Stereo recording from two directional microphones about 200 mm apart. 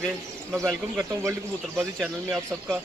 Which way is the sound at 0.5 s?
15° right (ahead or behind).